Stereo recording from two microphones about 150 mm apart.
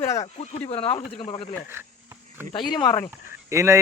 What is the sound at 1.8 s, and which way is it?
Speech, 15° right (ahead or behind).